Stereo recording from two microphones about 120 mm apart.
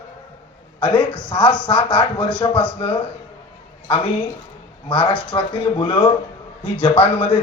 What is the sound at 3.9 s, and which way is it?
Speech, 50° left (ahead or behind).